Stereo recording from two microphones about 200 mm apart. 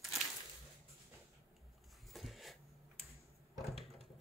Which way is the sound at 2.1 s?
Centre (ahead or behind).